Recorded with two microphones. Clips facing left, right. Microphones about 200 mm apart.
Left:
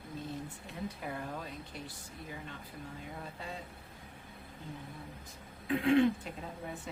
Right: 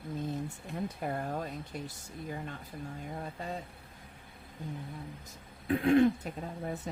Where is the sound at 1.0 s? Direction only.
45° right (ahead or behind).